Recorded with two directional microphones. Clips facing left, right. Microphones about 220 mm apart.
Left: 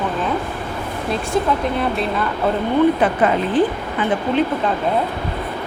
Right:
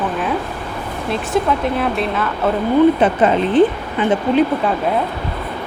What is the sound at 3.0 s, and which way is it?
Speech, 25° right (ahead or behind).